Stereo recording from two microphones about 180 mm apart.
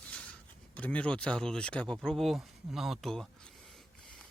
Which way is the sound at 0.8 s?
5° left (ahead or behind).